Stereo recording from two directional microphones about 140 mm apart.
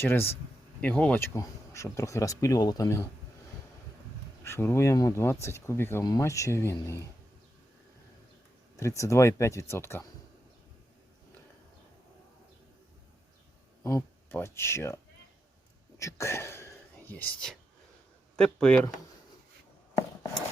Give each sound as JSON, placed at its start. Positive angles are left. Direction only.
{"t": 0.0, "sound": "speech", "side_deg": 15}
{"t": 4.4, "sound": "speech", "side_deg": 20}
{"t": 8.7, "sound": "speech", "side_deg": 20}
{"t": 13.8, "sound": "speech", "side_deg": 20}
{"t": 16.0, "sound": "whispering", "side_deg": 20}
{"t": 18.3, "sound": "speech", "side_deg": 5}